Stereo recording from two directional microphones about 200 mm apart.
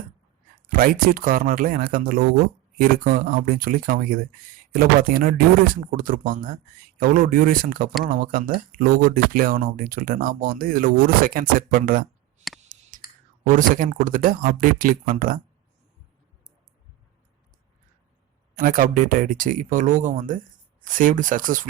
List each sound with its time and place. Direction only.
0.7 s speech: 45° right (ahead or behind)
12.4 s a sound: 35° right (ahead or behind)
13.5 s speech: 40° right (ahead or behind)
18.5 s speech: 45° right (ahead or behind)